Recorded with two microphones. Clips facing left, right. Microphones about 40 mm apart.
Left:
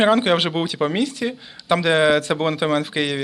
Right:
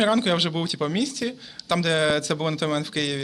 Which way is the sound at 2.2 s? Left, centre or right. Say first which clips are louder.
Left 5 dB; centre.